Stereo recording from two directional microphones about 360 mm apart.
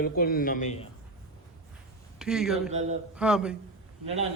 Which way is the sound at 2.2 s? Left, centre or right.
Centre.